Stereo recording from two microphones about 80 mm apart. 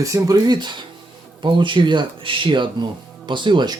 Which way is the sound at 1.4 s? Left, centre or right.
Right.